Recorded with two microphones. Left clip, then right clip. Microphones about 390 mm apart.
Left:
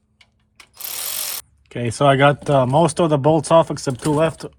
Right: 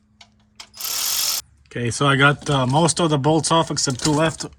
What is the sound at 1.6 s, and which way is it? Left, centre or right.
Speech, centre.